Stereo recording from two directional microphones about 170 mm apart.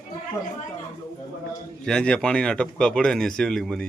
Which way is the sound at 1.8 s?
5° left (ahead or behind).